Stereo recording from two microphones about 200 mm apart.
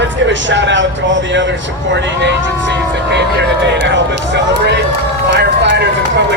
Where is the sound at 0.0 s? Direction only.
65° right (ahead or behind).